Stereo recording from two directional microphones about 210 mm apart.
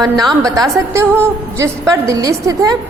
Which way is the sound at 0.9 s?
15° right (ahead or behind).